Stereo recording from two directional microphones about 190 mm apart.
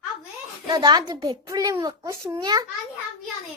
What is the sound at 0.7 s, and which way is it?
A child's voice, 20° right (ahead or behind).